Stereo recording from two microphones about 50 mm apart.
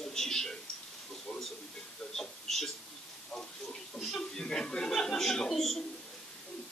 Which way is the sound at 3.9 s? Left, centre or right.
Centre.